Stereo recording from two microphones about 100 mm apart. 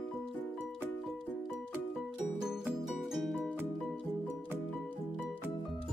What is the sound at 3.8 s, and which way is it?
Music, 10° left (ahead or behind).